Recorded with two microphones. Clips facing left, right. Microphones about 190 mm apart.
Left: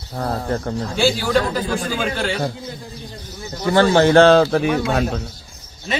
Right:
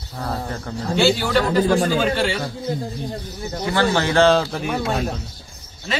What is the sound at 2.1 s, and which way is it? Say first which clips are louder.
Speech: right 1 dB; centre (ahead or behind).